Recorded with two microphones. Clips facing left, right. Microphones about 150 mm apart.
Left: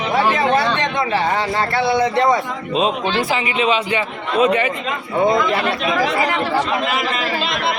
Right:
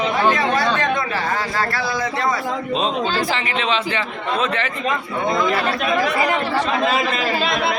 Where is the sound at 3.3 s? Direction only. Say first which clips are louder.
Left 3 dB; 10° left (ahead or behind).